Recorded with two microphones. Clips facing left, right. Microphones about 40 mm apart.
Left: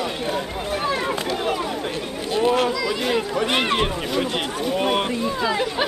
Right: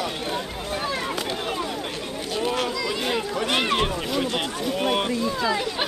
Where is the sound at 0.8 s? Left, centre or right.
Centre.